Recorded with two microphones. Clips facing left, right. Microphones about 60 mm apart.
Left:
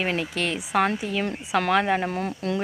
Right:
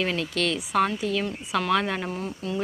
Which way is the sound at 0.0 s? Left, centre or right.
Left.